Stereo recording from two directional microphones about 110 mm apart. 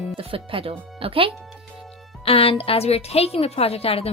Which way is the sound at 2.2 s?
60° left (ahead or behind).